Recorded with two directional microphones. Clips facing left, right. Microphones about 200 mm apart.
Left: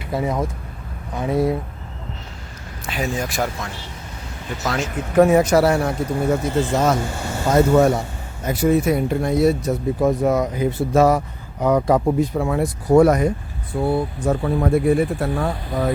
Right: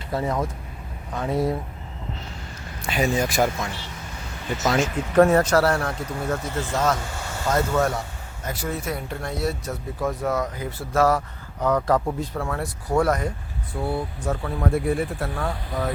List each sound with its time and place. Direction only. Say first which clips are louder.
0.1 s speech: left 3 dB; 15° left (ahead or behind)
2.8 s speech: right 2 dB; centre (ahead or behind); by 15.5 s 15° left (ahead or behind)